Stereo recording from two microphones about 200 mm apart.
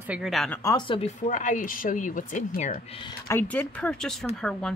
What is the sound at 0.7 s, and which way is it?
Speech, 25° left (ahead or behind).